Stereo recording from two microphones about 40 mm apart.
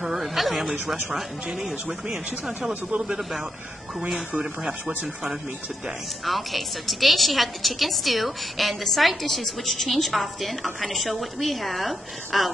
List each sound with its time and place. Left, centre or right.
0.0 s a sound: centre
1.7 s a woman's voice: centre
4.4 s speech: right
6.2 s a woman's voice: centre